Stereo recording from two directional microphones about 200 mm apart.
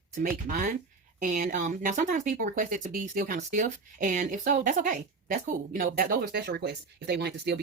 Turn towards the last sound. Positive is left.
turn(degrees=-55)  # may be behind; listen again after turning